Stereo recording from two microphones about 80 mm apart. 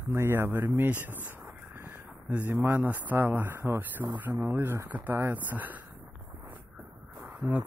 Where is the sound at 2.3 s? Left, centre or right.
Right.